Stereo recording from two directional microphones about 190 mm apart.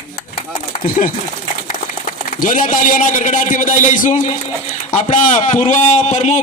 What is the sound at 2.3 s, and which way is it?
A man's voice, 45° left (ahead or behind).